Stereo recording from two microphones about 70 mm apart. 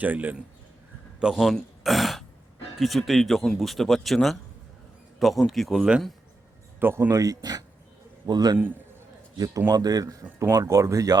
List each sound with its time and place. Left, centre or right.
0.0 s a man's voice: right
1.2 s a man's voice: centre
6.7 s speech: right
7.1 s speech: right
8.3 s speech: right
9.6 s speech: right